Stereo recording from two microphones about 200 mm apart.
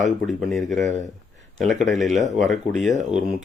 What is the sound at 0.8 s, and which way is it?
Speech, 35° right (ahead or behind).